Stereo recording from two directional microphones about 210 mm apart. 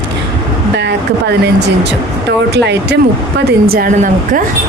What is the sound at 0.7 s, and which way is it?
Speech, 55° right (ahead or behind).